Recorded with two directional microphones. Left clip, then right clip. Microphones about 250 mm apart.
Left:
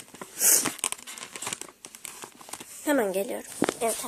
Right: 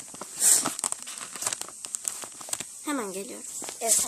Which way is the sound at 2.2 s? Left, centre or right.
Right.